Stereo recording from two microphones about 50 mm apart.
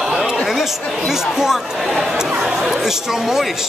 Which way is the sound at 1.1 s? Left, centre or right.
Centre.